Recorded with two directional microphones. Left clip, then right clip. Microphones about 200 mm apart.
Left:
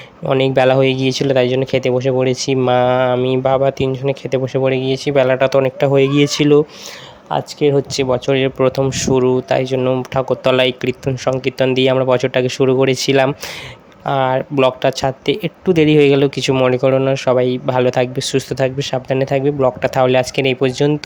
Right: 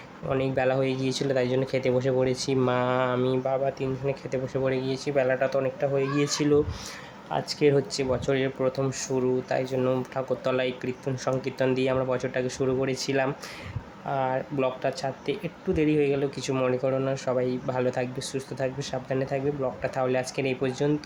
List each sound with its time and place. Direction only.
0.3 s speech: 45° left (ahead or behind)